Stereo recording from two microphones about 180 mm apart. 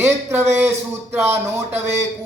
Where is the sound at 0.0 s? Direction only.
15° right (ahead or behind).